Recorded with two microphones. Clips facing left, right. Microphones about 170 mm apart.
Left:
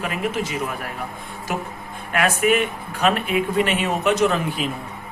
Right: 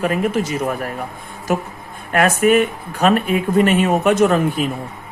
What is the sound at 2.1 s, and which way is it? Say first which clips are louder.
Speech: right 5 dB; 45° right (ahead or behind).